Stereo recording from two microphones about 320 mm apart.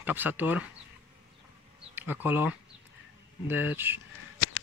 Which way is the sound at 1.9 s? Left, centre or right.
Centre.